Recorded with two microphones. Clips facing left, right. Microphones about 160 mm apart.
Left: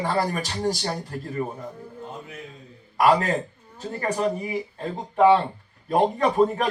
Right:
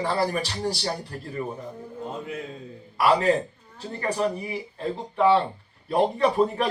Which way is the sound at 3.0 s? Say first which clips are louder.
Left 1 dB; 40° left (ahead or behind).